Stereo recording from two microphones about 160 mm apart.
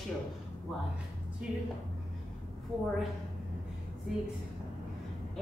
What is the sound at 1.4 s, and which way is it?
Speech, 5° right (ahead or behind).